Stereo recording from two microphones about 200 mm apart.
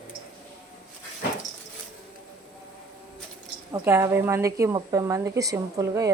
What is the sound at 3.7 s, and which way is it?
A woman's voice, 15° right (ahead or behind).